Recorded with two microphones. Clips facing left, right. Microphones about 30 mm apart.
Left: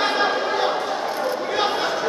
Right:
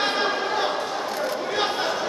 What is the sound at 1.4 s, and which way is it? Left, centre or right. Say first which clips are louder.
Chatter: left 3 dB; centre.